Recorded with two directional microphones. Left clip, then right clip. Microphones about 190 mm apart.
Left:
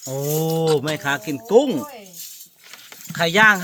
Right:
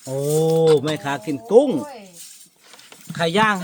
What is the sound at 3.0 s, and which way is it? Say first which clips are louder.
Speech: left 3 dB; 5° right (ahead or behind).